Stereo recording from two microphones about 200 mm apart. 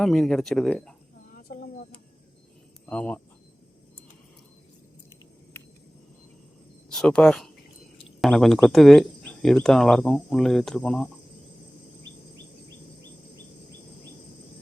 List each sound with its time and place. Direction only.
0.0 s speech: centre (ahead or behind)
1.4 s a sound: 45° left (ahead or behind)
2.9 s speech: 5° left (ahead or behind)
6.9 s speech: 5° left (ahead or behind)